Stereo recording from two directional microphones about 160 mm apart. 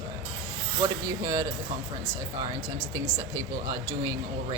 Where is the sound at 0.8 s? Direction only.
20° right (ahead or behind).